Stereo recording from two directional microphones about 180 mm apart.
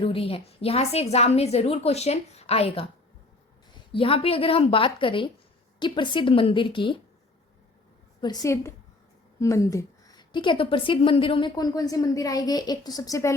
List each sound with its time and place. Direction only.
0.0 s a woman's voice: 30° left (ahead or behind)
3.9 s a woman's voice: 30° left (ahead or behind)
8.2 s a woman's voice: 20° left (ahead or behind)